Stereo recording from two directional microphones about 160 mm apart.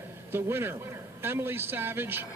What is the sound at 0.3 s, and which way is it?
A man's voice, 15° right (ahead or behind).